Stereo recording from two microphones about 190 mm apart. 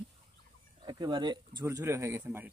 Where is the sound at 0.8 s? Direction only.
25° right (ahead or behind).